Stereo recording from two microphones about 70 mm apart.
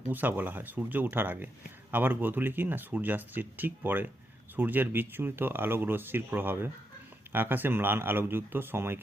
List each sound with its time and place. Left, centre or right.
0.1 s speech: right